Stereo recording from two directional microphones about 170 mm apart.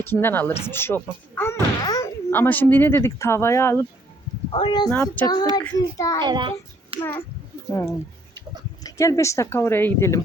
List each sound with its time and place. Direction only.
0.0 s a woman's voice: 15° left (ahead or behind)
4.5 s a child's voice: 30° left (ahead or behind)
4.9 s a woman's voice: 10° left (ahead or behind)
5.2 s a child's voice: 25° left (ahead or behind)
6.2 s a child's voice: 25° right (ahead or behind)
6.9 s a sound: 35° right (ahead or behind)
7.7 s a woman's voice: 15° left (ahead or behind)